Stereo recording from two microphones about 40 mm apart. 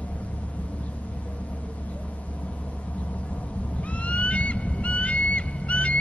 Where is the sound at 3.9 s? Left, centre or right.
Left.